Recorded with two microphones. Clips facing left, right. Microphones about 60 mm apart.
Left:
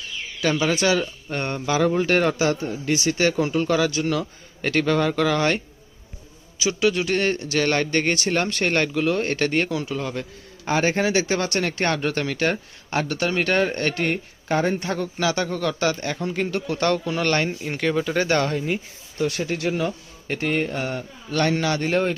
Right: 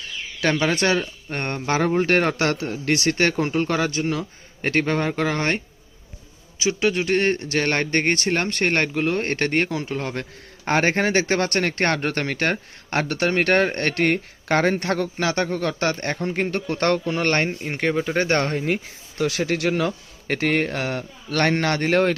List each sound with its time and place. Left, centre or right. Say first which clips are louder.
0.4 s speech: even; right
4.0 s a man's voice: left 1 dB; right
4.6 s a man's voice: left 1 dB; right
17.1 s a man's voice: right 1 dB; right
17.7 s a man's voice: even; right
18.6 s speech: right 2 dB; right